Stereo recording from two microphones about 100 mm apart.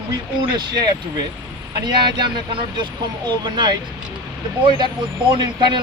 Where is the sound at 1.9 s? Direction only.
50° right (ahead or behind).